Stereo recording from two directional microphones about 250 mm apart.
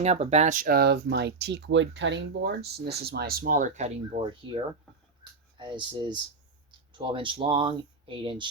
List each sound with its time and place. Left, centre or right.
0.0 s speech: right
5.2 s a sound: centre
6.7 s speech: centre